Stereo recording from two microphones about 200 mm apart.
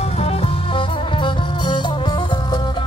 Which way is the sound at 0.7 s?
25° left (ahead or behind).